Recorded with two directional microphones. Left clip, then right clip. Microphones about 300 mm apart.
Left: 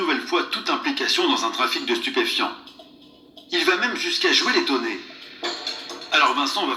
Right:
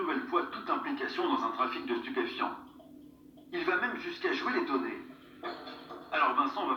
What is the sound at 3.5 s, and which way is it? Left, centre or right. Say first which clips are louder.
Speech: left 11 dB; left.